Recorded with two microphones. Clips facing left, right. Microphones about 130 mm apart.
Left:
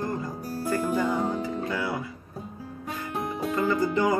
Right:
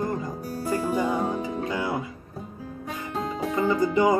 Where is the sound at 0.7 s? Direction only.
15° right (ahead or behind).